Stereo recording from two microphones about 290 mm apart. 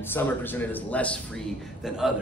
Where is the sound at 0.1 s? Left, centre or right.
Centre.